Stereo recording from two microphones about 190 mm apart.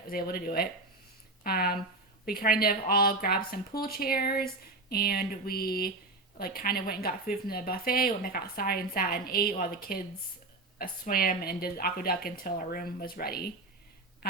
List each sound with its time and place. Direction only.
0.1 s speech: 50° left (ahead or behind)